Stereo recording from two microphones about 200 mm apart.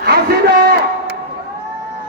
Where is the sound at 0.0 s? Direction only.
55° right (ahead or behind).